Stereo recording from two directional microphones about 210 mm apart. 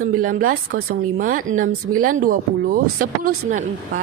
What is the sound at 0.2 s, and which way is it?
Speech, 40° right (ahead or behind).